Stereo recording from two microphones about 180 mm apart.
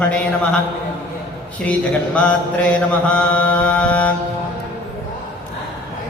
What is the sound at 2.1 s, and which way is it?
Mantra, 5° left (ahead or behind).